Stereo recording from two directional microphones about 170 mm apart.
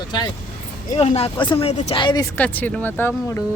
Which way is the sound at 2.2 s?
10° left (ahead or behind).